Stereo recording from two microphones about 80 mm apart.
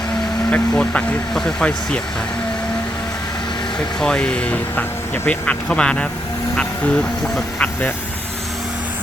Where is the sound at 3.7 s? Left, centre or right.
Centre.